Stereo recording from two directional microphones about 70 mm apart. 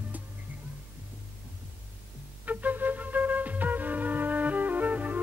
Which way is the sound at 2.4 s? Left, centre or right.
Right.